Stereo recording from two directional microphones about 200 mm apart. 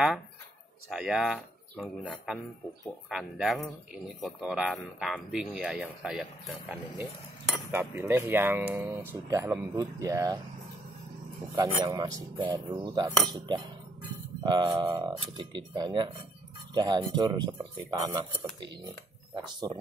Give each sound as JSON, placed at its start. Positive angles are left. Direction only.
{"t": 0.8, "sound": "speech", "side_deg": 0}
{"t": 7.7, "sound": "speech", "side_deg": -10}
{"t": 11.5, "sound": "cutlery", "side_deg": -20}